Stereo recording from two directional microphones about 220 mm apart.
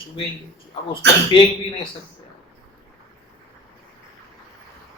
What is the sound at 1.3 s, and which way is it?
Speech, 20° left (ahead or behind).